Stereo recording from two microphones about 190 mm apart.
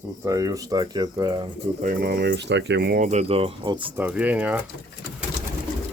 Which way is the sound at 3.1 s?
35° right (ahead or behind).